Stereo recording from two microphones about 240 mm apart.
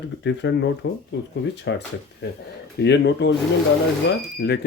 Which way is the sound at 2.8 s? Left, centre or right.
Left.